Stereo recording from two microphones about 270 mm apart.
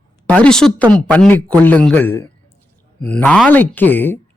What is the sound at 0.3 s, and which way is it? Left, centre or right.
A man's voice, centre.